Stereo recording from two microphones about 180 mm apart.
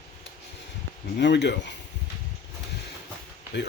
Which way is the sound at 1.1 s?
75° left (ahead or behind).